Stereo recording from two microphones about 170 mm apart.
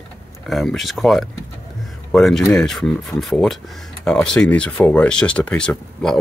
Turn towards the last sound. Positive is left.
turn(degrees=5)  # may be behind; listen again after turning